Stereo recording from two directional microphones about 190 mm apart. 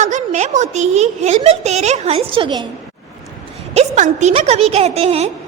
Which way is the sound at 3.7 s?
40° right (ahead or behind).